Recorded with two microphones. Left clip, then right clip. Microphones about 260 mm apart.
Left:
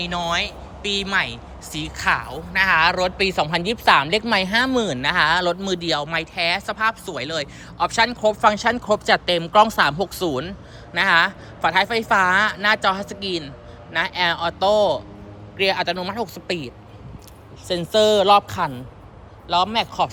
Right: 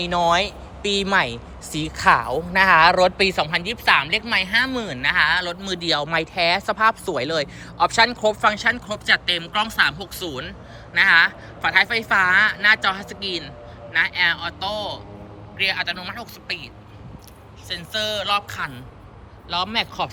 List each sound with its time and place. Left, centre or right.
0.0 s speech: centre; by 16.3 s left
17.7 s speech: left